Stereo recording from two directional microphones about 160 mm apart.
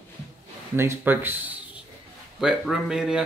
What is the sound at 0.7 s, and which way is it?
Speech, 15° right (ahead or behind).